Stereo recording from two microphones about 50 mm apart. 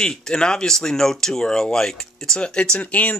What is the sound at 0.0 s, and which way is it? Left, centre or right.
Speech, centre.